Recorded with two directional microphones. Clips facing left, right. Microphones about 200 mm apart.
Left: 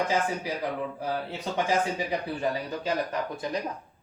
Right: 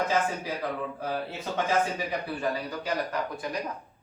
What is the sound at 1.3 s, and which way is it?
Speech, 15° left (ahead or behind).